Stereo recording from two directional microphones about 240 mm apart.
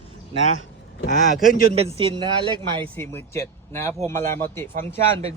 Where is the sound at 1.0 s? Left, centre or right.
Left.